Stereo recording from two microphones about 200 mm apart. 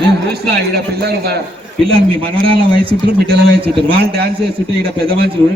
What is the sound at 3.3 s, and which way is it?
A man's voice, 55° right (ahead or behind).